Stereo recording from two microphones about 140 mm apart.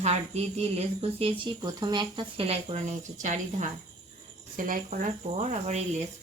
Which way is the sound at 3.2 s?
60° right (ahead or behind).